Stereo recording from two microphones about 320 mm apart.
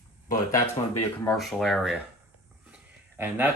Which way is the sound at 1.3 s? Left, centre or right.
Centre.